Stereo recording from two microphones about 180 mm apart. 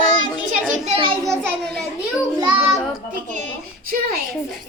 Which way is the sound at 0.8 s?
30° right (ahead or behind).